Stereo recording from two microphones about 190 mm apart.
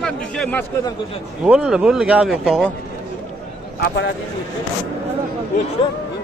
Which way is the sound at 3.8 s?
65° left (ahead or behind).